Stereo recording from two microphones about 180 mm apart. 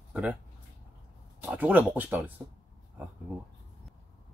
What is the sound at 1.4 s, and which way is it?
Speech, 10° right (ahead or behind).